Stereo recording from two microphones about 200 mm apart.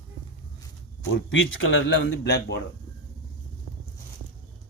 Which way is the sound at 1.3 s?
70° left (ahead or behind).